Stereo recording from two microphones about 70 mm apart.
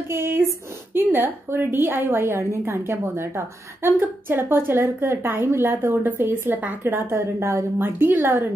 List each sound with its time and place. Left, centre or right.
0.1 s a woman's voice: right
7.2 s a woman's voice: right